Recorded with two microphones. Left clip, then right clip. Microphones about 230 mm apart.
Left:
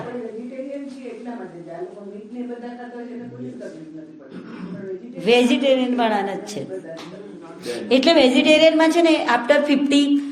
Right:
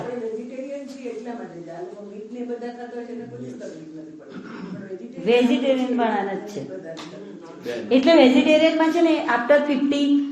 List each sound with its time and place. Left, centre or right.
5.2 s a woman's voice: left
7.9 s a woman's voice: left